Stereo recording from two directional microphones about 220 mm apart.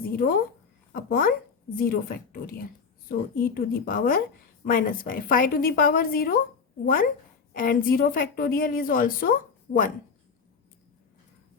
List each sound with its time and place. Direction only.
0.9 s a woman's voice: 40° left (ahead or behind)